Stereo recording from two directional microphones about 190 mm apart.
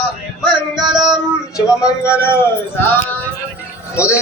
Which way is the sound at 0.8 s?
25° right (ahead or behind).